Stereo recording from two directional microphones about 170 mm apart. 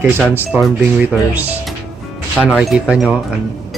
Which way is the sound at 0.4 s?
5° right (ahead or behind).